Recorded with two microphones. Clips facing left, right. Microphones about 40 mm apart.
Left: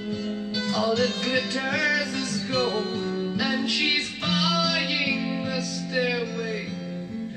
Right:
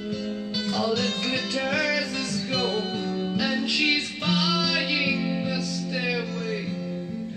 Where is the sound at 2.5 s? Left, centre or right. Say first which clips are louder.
Left 2 dB; centre.